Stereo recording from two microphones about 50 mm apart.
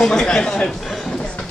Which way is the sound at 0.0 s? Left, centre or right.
Centre.